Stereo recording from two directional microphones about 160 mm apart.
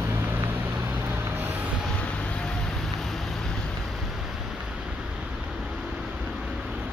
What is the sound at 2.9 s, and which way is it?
Vehicle, centre (ahead or behind).